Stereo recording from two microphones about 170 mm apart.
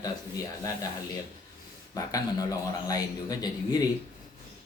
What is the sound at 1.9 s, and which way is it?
Speech, 20° left (ahead or behind).